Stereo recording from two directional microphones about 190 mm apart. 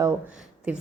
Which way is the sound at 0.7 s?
5° right (ahead or behind).